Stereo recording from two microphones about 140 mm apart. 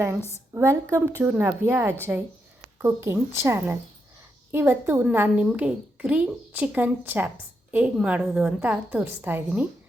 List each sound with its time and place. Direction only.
0.2 s a woman's voice: 20° left (ahead or behind)
0.5 s a woman's voice: 20° right (ahead or behind)